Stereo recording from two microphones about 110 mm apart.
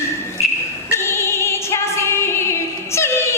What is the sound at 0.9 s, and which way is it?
Music, 25° left (ahead or behind).